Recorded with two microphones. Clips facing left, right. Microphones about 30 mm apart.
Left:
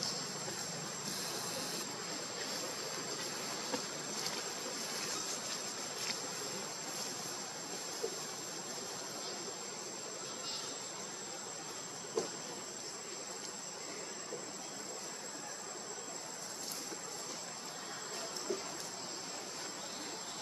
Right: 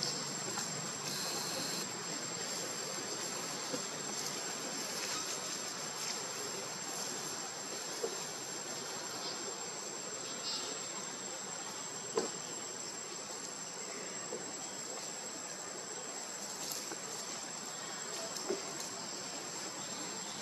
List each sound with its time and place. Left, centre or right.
12.2 s insect: right